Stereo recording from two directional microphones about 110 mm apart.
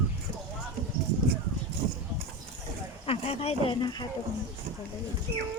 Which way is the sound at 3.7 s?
40° left (ahead or behind).